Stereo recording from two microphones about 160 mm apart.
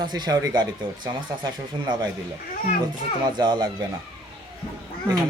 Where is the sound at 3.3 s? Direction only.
30° right (ahead or behind).